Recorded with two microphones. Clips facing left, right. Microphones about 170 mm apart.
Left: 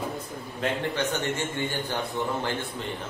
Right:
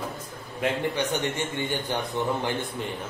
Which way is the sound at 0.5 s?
15° right (ahead or behind).